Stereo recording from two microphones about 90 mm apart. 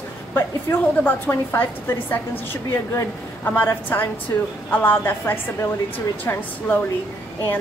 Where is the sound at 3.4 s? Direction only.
25° left (ahead or behind).